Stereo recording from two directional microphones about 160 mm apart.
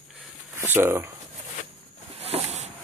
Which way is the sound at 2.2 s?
40° right (ahead or behind).